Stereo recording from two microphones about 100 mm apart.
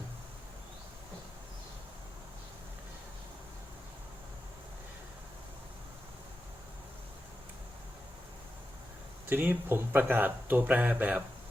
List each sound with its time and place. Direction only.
9.3 s speech: 20° right (ahead or behind)